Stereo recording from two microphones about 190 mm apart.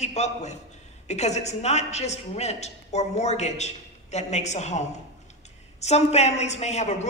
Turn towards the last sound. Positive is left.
turn(degrees=35)  # may be behind; listen again after turning